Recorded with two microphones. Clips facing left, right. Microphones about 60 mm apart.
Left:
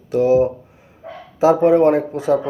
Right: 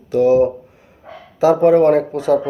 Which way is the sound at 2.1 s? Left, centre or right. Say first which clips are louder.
Right 2 dB; centre.